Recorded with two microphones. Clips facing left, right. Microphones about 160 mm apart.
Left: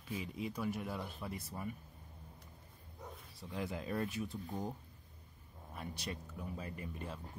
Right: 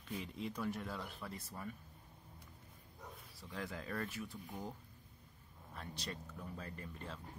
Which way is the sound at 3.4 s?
15° left (ahead or behind).